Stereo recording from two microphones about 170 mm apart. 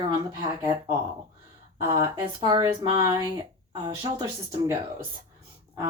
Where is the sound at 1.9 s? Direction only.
20° right (ahead or behind).